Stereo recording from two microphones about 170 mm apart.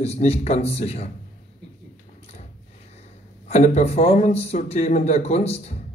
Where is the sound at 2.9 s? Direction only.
40° left (ahead or behind).